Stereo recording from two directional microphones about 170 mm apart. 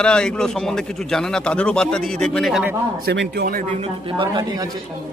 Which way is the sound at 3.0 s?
75° right (ahead or behind).